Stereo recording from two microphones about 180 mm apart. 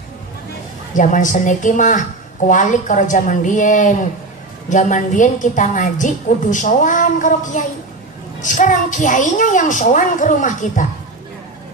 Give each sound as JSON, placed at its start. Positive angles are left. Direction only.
{"t": 0.9, "sound": "a woman's voice", "side_deg": 45}